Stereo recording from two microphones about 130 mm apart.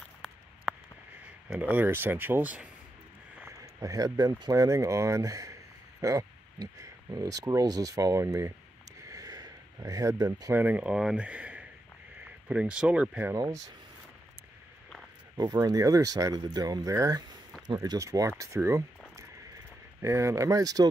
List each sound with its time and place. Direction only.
1.5 s speech: 15° right (ahead or behind)
3.3 s speech: 20° right (ahead or behind)
9.0 s a sound: 30° right (ahead or behind)
10.5 s speech: 15° right (ahead or behind)
13.3 s speech: 25° right (ahead or behind)
15.3 s speech: 30° right (ahead or behind)